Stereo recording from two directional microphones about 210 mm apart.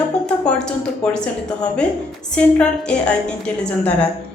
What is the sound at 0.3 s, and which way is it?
A woman's voice, 5° left (ahead or behind).